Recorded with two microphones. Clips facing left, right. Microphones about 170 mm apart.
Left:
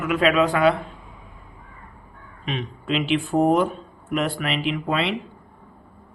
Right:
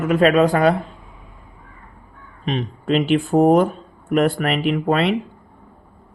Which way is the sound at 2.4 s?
40° right (ahead or behind).